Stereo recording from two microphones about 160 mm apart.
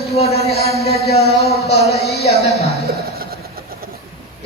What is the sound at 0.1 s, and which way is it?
Speech, 40° left (ahead or behind).